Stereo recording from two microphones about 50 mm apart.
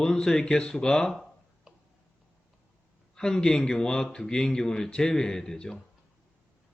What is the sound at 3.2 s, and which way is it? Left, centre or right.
Speech, centre.